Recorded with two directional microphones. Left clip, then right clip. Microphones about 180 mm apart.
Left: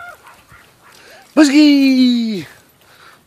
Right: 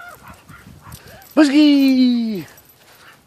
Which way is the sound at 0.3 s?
55° right (ahead or behind).